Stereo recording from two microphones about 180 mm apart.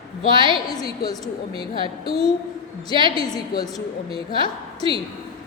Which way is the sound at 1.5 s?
30° right (ahead or behind).